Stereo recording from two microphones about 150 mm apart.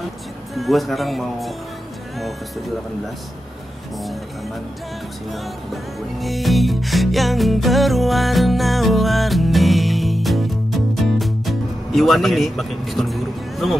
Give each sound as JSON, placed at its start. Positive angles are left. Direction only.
{"t": 0.6, "sound": "music", "side_deg": 0}
{"t": 5.3, "sound": "music", "side_deg": 0}